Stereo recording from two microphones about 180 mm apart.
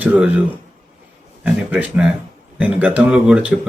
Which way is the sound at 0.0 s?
10° right (ahead or behind).